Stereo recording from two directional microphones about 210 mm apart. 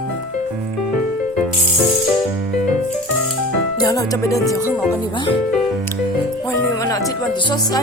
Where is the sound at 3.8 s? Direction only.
15° left (ahead or behind).